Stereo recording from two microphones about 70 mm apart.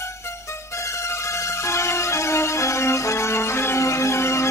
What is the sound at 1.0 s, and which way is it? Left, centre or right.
Music, left.